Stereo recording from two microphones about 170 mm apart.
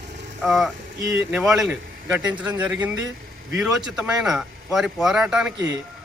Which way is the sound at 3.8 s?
5° right (ahead or behind).